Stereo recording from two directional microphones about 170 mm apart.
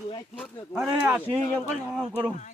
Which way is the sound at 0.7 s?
5° right (ahead or behind).